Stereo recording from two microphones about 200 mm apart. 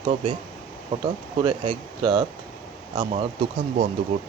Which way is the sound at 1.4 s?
25° right (ahead or behind).